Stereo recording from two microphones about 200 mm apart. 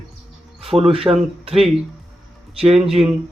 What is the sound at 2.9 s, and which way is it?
Speech, centre (ahead or behind).